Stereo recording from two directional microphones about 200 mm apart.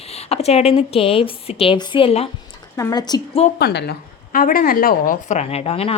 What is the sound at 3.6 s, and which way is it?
A woman's voice, 55° left (ahead or behind).